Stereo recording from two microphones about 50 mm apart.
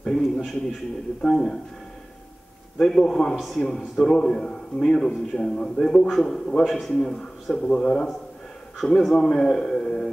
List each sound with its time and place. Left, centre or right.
0.0 s a sound: centre
1.2 s a man's voice: centre
2.8 s a man's voice: centre
3.3 s a man's voice: centre
3.6 s a man's voice: centre
7.6 s a man's voice: centre
8.7 s a man's voice: centre